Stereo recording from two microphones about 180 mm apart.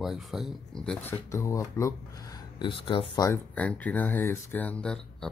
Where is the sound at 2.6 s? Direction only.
30° left (ahead or behind).